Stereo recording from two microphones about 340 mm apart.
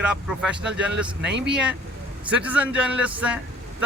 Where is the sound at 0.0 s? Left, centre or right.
Centre.